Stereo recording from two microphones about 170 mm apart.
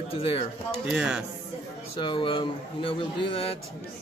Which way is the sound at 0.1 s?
35° left (ahead or behind).